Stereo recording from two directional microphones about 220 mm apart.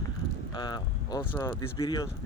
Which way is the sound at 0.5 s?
20° left (ahead or behind).